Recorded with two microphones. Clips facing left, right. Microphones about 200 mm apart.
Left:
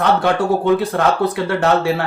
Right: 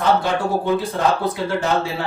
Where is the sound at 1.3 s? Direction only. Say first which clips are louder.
Left 4 dB; 70° left (ahead or behind).